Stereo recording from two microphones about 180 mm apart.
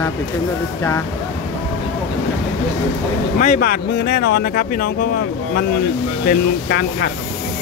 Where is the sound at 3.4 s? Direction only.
50° left (ahead or behind).